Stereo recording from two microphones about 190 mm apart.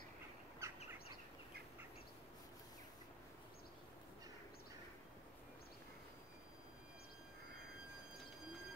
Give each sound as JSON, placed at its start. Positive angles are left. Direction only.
{"t": 0.6, "sound": "bird", "side_deg": -15}